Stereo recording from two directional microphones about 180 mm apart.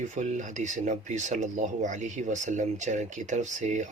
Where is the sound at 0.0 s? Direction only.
45° right (ahead or behind).